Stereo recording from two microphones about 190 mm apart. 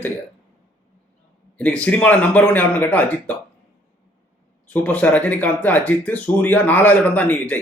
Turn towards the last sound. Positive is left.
turn(degrees=10)  # may be behind; listen again after turning